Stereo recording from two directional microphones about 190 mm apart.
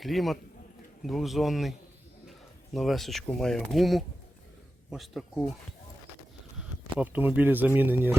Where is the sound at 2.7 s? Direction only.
Centre (ahead or behind).